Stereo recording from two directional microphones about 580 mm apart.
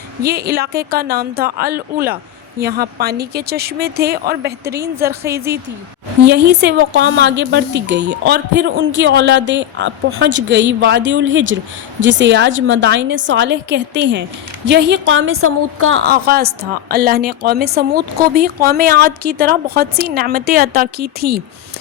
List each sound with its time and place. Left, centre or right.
0.2 s a woman's voice: centre
4.7 s a woman's voice: centre
6.2 s a woman's voice: centre